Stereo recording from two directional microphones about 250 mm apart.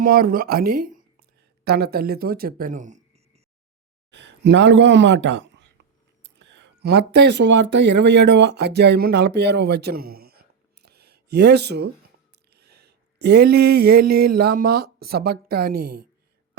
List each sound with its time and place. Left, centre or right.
0.0 s speech: right
4.1 s speech: right
12.5 s a sound: right